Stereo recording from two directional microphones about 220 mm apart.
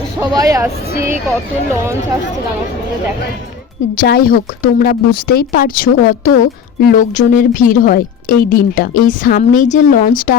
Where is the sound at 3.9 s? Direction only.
45° left (ahead or behind).